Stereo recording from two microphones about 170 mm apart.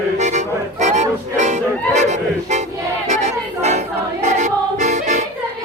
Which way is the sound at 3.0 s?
40° right (ahead or behind).